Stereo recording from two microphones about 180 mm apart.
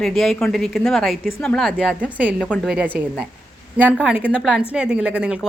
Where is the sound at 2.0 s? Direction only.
10° right (ahead or behind).